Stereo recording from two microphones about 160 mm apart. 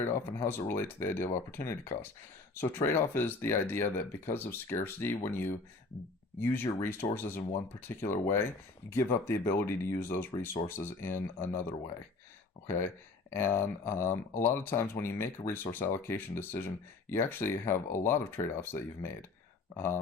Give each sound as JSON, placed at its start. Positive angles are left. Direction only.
{"t": 0.0, "sound": "speech", "side_deg": 15}
{"t": 13.3, "sound": "speech", "side_deg": 15}